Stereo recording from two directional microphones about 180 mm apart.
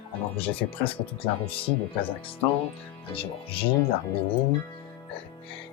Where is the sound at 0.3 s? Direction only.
30° left (ahead or behind).